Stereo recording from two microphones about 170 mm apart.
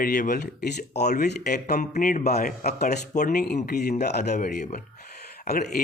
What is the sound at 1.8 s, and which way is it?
Speech, 50° left (ahead or behind).